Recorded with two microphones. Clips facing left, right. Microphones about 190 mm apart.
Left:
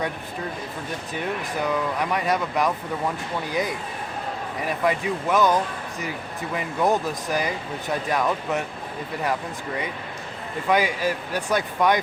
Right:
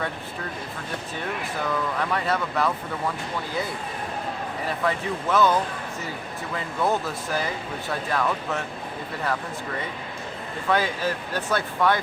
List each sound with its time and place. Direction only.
1.6 s speech: 15° left (ahead or behind)
10.7 s speech: 10° left (ahead or behind)